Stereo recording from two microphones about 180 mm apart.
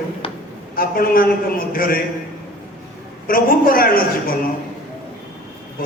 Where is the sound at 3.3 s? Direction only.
55° left (ahead or behind).